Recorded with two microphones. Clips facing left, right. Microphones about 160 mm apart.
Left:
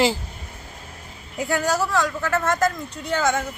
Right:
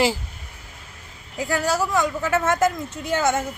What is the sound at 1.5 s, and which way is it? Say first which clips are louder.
Speech: even; 10° right (ahead or behind).